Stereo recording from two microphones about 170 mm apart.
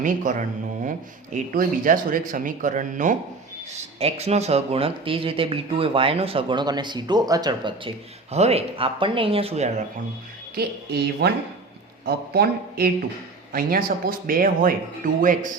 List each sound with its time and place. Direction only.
0.0 s speech: 45° right (ahead or behind)
10.5 s speech: 65° right (ahead or behind); by 15.4 s 50° right (ahead or behind)